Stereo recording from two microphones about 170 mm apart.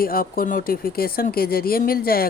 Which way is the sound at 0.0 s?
60° left (ahead or behind).